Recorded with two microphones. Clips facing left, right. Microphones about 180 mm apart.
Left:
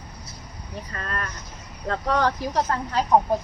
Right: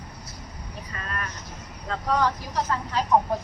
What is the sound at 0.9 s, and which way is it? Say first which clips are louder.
Speech: left 3 dB; 40° left (ahead or behind).